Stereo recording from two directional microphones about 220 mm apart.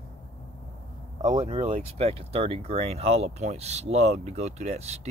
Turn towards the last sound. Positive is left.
turn(degrees=-30)  # may be behind; listen again after turning